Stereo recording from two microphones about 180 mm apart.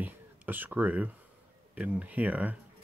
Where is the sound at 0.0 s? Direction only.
10° right (ahead or behind).